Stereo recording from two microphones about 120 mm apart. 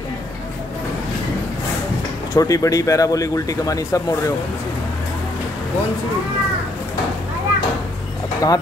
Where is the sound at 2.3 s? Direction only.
30° left (ahead or behind).